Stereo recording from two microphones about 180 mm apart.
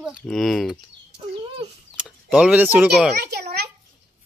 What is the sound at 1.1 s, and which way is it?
Speech, 30° right (ahead or behind).